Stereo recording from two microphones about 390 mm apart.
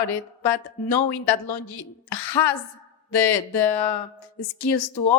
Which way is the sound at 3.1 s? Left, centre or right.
Left.